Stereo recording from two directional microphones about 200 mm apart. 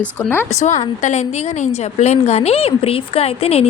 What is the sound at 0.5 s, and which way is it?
A woman's voice, 35° left (ahead or behind).